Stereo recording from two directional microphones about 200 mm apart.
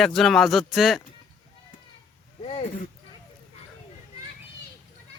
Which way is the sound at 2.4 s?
30° left (ahead or behind).